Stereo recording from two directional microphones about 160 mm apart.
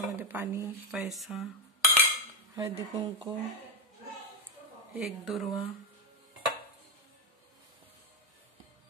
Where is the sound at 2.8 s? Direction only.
25° right (ahead or behind).